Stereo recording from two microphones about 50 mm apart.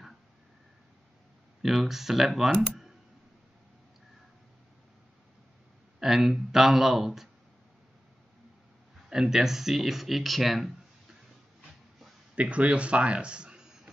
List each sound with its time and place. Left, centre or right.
1.6 s speech: centre
5.9 s speech: centre
9.1 s speech: centre
12.4 s speech: right